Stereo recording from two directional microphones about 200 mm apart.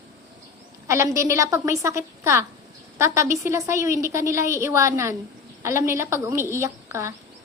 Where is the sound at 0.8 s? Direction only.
15° right (ahead or behind).